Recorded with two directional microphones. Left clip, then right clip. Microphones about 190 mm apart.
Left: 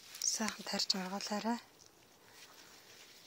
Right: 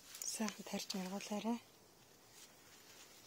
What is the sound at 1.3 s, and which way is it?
Speech, 40° left (ahead or behind).